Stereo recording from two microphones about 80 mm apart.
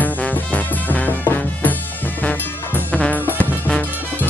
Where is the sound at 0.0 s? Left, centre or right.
Centre.